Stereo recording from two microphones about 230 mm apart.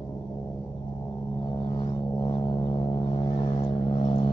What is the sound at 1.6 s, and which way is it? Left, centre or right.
Vehicle, centre.